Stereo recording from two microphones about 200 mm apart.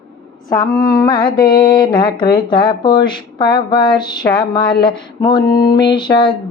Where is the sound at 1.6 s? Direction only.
20° left (ahead or behind).